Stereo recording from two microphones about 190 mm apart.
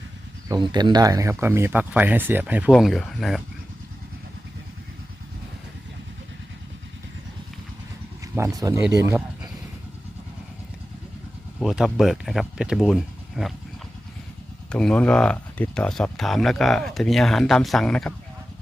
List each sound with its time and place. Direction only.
0.4 s speech: 20° right (ahead or behind)
2.7 s speech: centre (ahead or behind)
8.2 s speech: 15° right (ahead or behind)
11.6 s speech: centre (ahead or behind)
14.7 s speech: 5° left (ahead or behind)